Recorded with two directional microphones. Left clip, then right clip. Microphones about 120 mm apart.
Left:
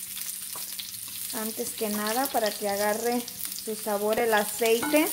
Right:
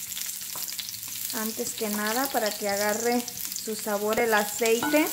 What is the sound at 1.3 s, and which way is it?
Frying, 15° left (ahead or behind).